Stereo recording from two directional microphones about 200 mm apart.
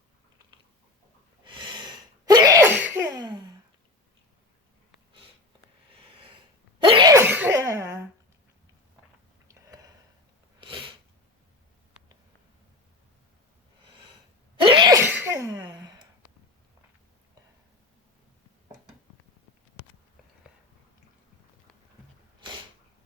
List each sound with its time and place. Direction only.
1.5 s sneeze: 25° right (ahead or behind)
6.7 s sneeze: 25° right (ahead or behind)
10.6 s sneeze: 25° right (ahead or behind)
14.6 s sneeze: 25° right (ahead or behind)
15.5 s a sound: 20° right (ahead or behind)